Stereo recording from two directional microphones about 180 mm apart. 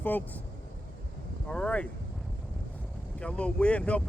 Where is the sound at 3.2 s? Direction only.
5° left (ahead or behind).